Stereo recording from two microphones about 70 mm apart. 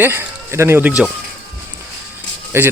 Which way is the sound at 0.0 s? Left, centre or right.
Right.